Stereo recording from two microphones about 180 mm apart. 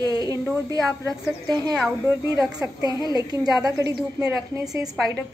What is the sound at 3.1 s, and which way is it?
A woman's voice, 20° right (ahead or behind).